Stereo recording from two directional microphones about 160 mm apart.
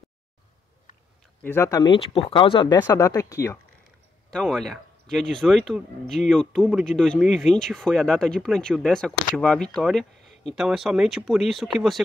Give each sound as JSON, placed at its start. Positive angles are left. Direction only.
{"t": 1.4, "sound": "speech", "side_deg": 15}
{"t": 1.9, "sound": "speech", "side_deg": 35}
{"t": 2.9, "sound": "speech", "side_deg": 20}
{"t": 4.3, "sound": "speech", "side_deg": 5}